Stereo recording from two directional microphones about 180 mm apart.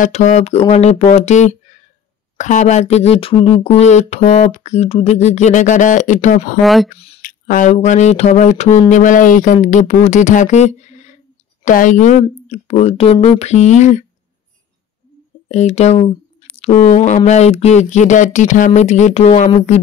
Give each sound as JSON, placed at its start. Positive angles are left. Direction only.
{"t": 0.0, "sound": "speech", "side_deg": 40}
{"t": 6.6, "sound": "speech", "side_deg": 0}
{"t": 7.2, "sound": "speech", "side_deg": 50}
{"t": 15.4, "sound": "speech", "side_deg": 40}